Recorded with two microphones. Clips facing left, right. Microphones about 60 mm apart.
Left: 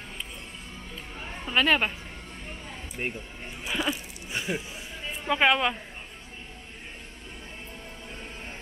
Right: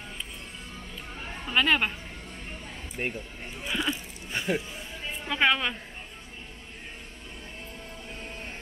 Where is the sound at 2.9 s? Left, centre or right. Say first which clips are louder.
Right 1 dB; centre.